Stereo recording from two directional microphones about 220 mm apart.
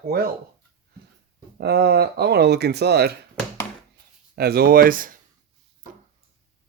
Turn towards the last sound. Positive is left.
turn(degrees=-40)  # may be behind; listen again after turning